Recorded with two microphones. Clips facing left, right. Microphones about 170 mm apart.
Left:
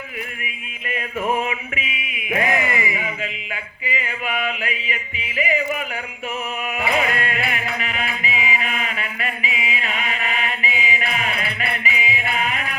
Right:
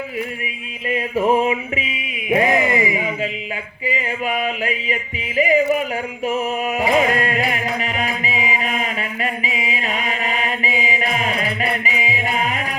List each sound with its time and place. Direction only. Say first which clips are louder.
0.9 s music: right 6 dB; 30° right (ahead or behind)
2.3 s a sound: right 5 dB; 30° right (ahead or behind)
3.8 s music: right 5 dB; 35° right (ahead or behind)